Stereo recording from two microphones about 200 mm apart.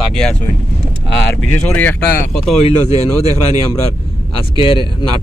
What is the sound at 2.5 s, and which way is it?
Speech, 35° left (ahead or behind).